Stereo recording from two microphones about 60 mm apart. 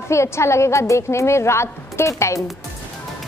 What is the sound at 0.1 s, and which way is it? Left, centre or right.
A woman's voice, left.